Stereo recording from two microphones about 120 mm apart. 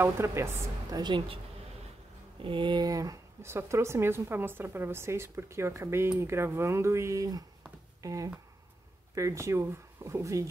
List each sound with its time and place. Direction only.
0.0 s speech: 25° right (ahead or behind)
1.0 s speech: 45° right (ahead or behind)
2.4 s speech: 40° right (ahead or behind); by 10.4 s 25° right (ahead or behind)